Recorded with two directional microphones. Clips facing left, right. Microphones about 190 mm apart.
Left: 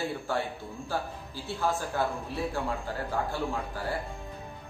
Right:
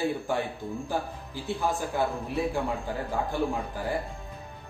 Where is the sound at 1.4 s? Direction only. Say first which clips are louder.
Right 1 dB; 15° right (ahead or behind).